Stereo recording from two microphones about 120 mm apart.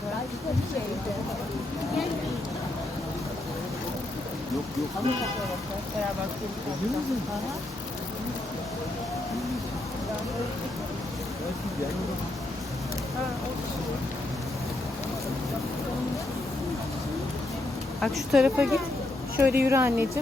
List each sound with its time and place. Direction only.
18.0 s speech: centre (ahead or behind); by 20.1 s 20° right (ahead or behind)